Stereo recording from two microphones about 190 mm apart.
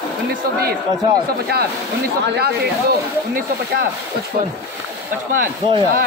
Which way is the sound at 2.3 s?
60° right (ahead or behind).